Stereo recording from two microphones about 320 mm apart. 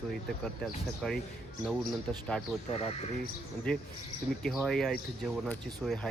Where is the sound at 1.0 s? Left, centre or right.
Centre.